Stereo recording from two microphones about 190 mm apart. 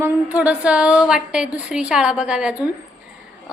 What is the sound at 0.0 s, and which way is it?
A woman's voice, 10° right (ahead or behind).